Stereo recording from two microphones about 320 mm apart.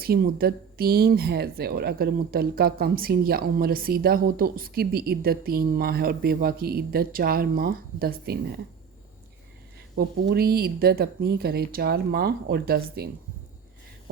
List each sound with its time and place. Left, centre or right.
0.0 s speech: right
9.9 s speech: right